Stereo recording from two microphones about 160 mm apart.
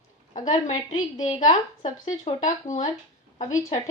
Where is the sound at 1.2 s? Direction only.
35° left (ahead or behind).